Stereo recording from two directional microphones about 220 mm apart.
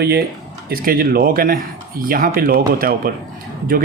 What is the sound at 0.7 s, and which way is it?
Speech, 40° right (ahead or behind).